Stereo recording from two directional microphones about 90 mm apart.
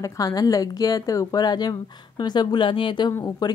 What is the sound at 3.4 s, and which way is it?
Speech, 45° left (ahead or behind).